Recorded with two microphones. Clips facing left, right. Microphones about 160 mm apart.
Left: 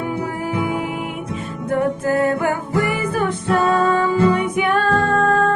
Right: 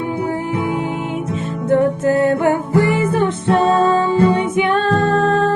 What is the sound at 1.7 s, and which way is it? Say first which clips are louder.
Music: right 4 dB; 25° right (ahead or behind).